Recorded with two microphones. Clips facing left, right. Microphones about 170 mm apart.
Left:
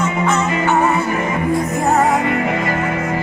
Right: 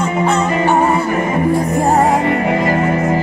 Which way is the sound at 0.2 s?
30° right (ahead or behind).